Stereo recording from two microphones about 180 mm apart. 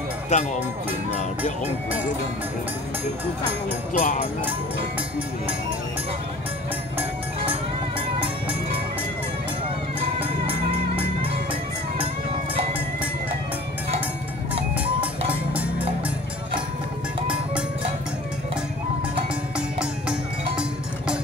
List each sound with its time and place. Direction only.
0.3 s speech: 40° left (ahead or behind)
4.0 s speech: 40° left (ahead or behind)
9.9 s music: 30° right (ahead or behind)
19.8 s music: 5° right (ahead or behind)